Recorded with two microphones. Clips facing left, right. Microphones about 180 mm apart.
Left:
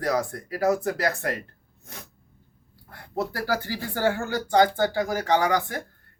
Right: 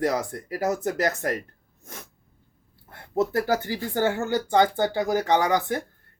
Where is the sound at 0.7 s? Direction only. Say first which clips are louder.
Left 3 dB; 35° left (ahead or behind).